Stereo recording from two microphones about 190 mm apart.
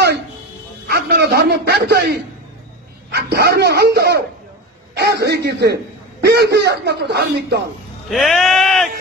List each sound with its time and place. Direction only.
0.8 s a sound: 60° right (ahead or behind)
3.1 s speech: 60° right (ahead or behind)
8.1 s speech: centre (ahead or behind)